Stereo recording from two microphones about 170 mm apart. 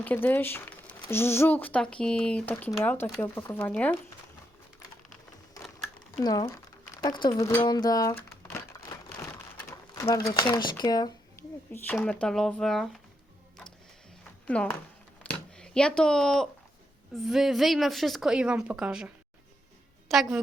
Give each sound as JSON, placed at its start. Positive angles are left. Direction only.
{"t": 0.0, "sound": "speech", "side_deg": 10}
{"t": 6.1, "sound": "speech", "side_deg": 25}
{"t": 9.6, "sound": "pigeon", "side_deg": 20}
{"t": 10.3, "sound": "speech", "side_deg": 25}
{"t": 11.9, "sound": "a woman's voice", "side_deg": 5}
{"t": 14.4, "sound": "a woman's voice", "side_deg": 10}